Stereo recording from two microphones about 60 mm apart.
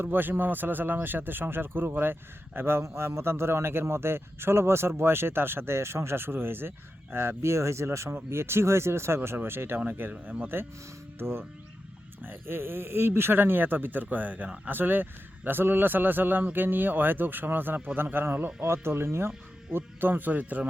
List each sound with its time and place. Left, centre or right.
0.0 s speech: right
14.4 s speech: centre
14.7 s speech: right
19.7 s speech: right